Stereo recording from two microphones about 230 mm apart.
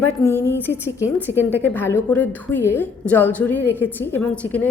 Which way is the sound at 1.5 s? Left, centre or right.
Centre.